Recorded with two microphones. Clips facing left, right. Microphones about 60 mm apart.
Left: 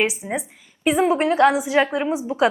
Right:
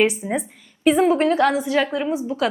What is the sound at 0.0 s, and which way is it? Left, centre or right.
A woman's voice, centre.